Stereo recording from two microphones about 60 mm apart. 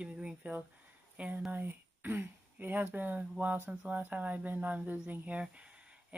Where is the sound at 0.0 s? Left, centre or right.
Centre.